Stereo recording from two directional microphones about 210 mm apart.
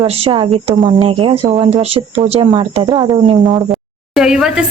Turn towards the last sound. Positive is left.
turn(degrees=-5)  # may be behind; listen again after turning